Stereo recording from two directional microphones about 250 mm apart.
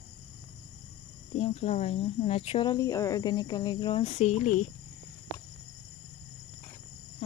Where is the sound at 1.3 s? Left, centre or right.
Left.